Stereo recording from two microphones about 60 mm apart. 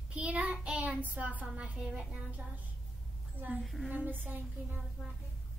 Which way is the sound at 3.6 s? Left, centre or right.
Centre.